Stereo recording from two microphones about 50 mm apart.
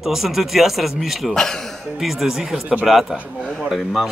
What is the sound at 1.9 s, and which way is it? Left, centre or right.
Speech, centre.